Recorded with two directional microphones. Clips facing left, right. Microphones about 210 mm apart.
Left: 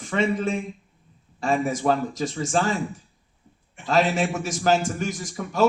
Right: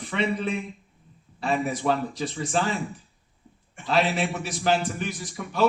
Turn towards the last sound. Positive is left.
turn(degrees=45)  # may be behind; listen again after turning